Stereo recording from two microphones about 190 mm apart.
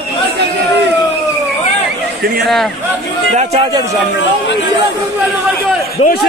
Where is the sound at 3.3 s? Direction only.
35° right (ahead or behind).